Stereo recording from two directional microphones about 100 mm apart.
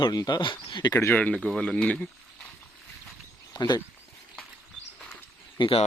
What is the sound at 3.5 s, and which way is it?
Speech, 45° left (ahead or behind).